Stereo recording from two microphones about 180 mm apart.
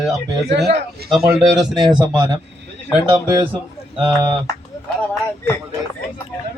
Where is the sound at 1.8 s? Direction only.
25° right (ahead or behind).